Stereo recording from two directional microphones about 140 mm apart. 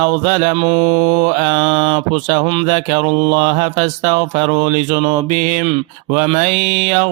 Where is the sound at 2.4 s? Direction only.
40° right (ahead or behind).